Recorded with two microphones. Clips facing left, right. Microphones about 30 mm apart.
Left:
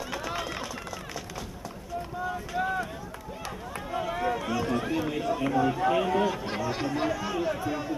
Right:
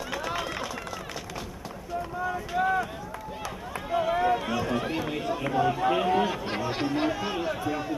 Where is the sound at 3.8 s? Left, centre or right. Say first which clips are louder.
Right 5 dB; centre.